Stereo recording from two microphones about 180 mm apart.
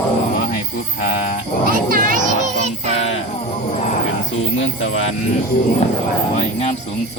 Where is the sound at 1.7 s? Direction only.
50° right (ahead or behind).